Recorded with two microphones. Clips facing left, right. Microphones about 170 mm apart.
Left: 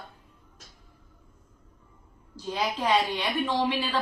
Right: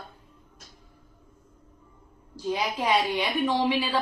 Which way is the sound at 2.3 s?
15° right (ahead or behind).